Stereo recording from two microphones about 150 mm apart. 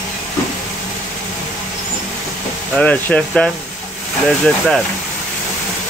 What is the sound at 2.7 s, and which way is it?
Speech, 10° left (ahead or behind).